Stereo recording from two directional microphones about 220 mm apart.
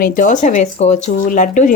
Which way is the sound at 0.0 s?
40° left (ahead or behind).